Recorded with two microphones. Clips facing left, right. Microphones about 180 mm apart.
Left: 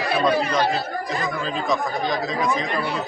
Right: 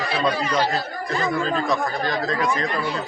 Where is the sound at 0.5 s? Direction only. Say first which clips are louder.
Left 1 dB; centre (ahead or behind).